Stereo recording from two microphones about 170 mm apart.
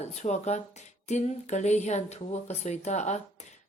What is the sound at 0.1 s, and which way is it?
Speech, 40° left (ahead or behind).